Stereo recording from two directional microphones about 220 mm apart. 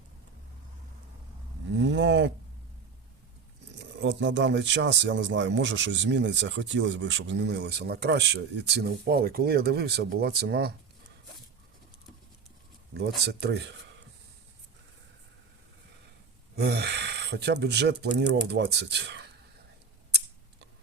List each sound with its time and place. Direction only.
1.8 s a sound: 55° right (ahead or behind)
3.8 s speech: 55° right (ahead or behind)
13.0 s speech: 50° right (ahead or behind)
16.6 s speech: 45° right (ahead or behind)